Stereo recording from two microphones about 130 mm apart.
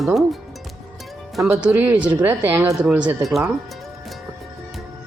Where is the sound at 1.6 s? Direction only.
10° right (ahead or behind).